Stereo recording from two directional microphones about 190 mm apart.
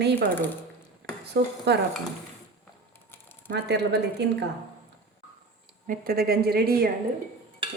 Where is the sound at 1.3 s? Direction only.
60° right (ahead or behind).